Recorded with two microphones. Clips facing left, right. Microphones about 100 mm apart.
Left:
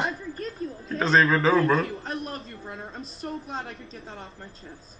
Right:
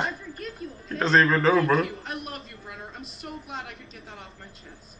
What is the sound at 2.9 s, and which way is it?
Speech, 35° left (ahead or behind).